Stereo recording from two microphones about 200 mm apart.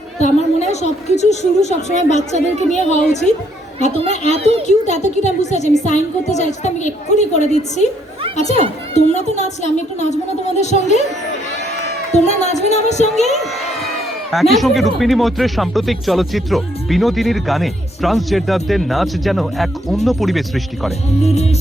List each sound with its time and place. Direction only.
0.2 s a woman's voice: 35° left (ahead or behind)
4.4 s a child's voice: 30° right (ahead or behind)
4.6 s a woman's voice: 35° left (ahead or behind)
12.1 s a woman's voice: 35° left (ahead or behind)
14.3 s speech: centre (ahead or behind)
21.2 s a woman's voice: 30° left (ahead or behind)